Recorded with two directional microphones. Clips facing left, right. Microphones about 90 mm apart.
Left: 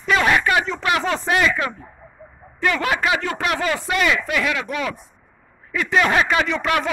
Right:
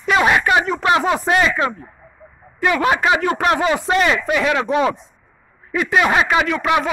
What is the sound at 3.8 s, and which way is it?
Speech, 30° right (ahead or behind).